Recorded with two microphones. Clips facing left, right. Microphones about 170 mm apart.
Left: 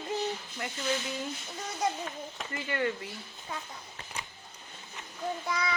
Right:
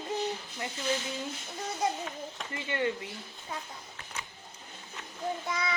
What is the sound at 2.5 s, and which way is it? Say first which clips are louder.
Child singing: even; 25° right (ahead or behind).